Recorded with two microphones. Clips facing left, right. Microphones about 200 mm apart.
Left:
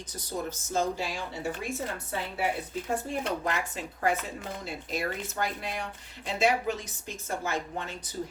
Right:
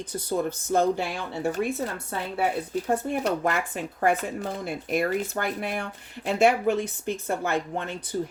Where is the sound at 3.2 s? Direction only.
40° right (ahead or behind).